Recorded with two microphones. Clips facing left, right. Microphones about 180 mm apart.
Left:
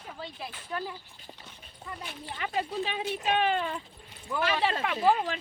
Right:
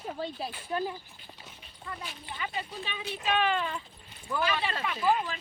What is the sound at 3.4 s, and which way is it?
Speech, 35° left (ahead or behind).